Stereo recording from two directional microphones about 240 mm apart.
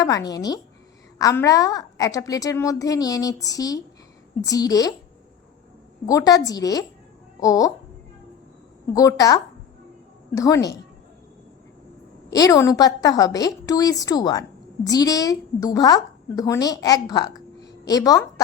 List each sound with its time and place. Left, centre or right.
0.0 s a woman's voice: centre
6.1 s a woman's voice: centre
8.9 s a woman's voice: centre
12.3 s a woman's voice: centre